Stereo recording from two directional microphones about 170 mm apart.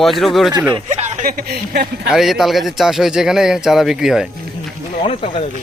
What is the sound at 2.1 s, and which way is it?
A man's voice, centre (ahead or behind).